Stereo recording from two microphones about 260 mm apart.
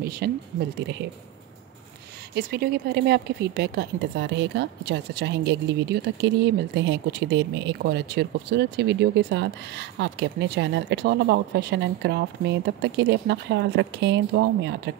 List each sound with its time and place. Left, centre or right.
0.0 s a woman's voice: right
2.3 s a woman's voice: right